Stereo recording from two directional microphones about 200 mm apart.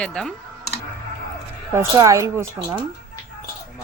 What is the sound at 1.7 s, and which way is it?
Speech, 15° right (ahead or behind).